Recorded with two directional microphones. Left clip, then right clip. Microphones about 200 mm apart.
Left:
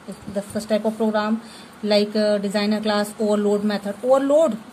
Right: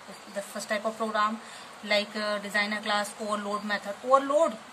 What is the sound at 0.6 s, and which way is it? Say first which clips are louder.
Speech: left 8 dB; 15° left (ahead or behind).